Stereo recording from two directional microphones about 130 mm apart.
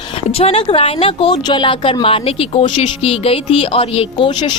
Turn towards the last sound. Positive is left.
turn(degrees=35)  # may be behind; listen again after turning